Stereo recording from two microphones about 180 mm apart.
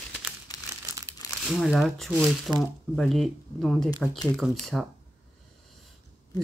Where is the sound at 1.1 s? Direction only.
15° right (ahead or behind).